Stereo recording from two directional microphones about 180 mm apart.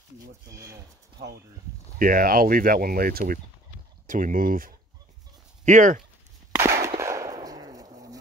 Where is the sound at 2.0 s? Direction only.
50° right (ahead or behind).